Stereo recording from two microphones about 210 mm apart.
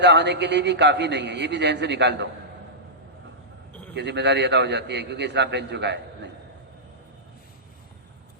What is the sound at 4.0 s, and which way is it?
A man's voice, 55° right (ahead or behind).